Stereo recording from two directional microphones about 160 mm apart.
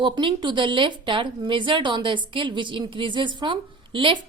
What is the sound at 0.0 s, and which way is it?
A woman's voice, 30° right (ahead or behind).